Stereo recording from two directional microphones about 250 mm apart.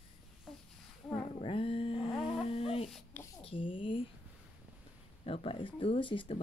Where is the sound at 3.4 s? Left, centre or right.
Left.